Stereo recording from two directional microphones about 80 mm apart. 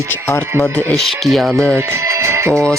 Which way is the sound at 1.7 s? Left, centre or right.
Right.